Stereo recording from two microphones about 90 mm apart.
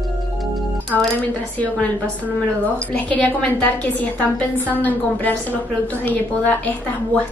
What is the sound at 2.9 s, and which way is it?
A woman's voice, 20° left (ahead or behind).